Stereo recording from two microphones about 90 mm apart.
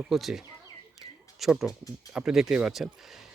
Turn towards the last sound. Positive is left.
turn(degrees=-5)  # may be behind; listen again after turning